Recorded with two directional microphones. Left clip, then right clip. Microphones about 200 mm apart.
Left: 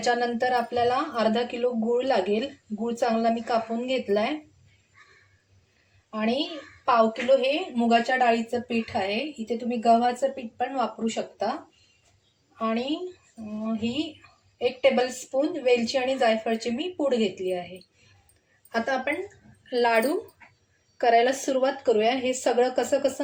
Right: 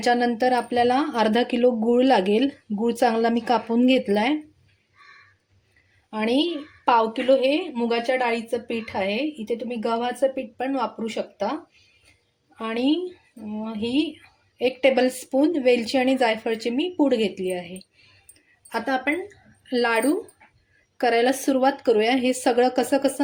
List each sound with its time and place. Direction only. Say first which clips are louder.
0.0 s a woman's voice: right 4 dB; 55° right (ahead or behind)
6.1 s a woman's voice: right 4 dB; 60° right (ahead or behind)
7.8 s a woman's voice: left 1 dB; 60° right (ahead or behind)
12.5 s a woman's voice: right 4 dB; 60° right (ahead or behind)
18.7 s speech: right 2 dB; 45° right (ahead or behind)
19.7 s speech: right 1 dB; 30° right (ahead or behind)